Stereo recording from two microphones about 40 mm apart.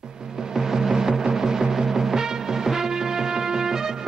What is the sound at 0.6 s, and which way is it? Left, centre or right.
Music, centre.